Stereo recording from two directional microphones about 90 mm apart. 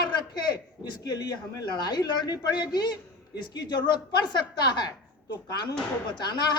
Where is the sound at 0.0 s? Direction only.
50° left (ahead or behind).